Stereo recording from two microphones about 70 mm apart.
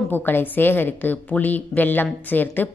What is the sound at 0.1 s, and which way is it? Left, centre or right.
A woman's voice, left.